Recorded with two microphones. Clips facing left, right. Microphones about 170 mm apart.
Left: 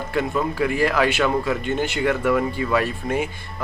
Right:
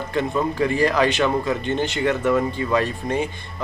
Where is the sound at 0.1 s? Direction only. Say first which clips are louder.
Right 1 dB; 10° left (ahead or behind).